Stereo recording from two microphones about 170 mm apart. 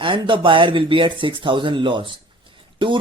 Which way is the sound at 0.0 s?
30° right (ahead or behind).